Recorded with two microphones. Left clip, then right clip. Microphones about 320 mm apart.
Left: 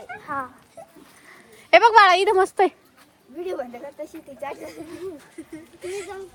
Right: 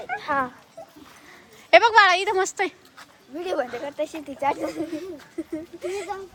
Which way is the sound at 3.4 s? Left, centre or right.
Right.